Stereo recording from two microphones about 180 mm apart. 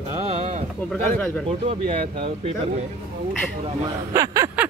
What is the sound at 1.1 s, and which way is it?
Speech, 5° left (ahead or behind).